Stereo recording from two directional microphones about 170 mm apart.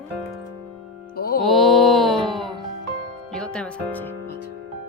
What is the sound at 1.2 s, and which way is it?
Music, 60° left (ahead or behind).